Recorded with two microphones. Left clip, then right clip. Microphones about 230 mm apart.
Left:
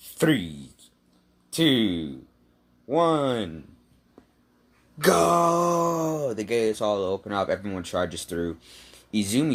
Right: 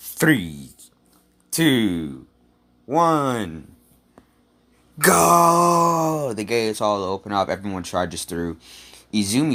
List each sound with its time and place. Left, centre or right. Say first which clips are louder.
0.0 s speech: right 4 dB; right
4.9 s speech: right 5 dB; right